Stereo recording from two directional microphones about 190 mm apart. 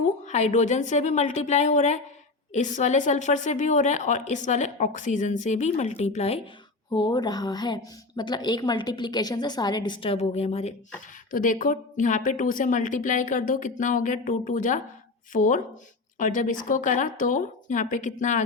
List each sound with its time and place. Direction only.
0.3 s a woman's voice: 35° left (ahead or behind)
6.9 s a woman's voice: 20° left (ahead or behind); by 18.4 s 40° left (ahead or behind)